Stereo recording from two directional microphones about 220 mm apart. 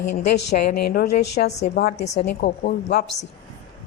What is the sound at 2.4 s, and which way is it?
Speech, 45° left (ahead or behind).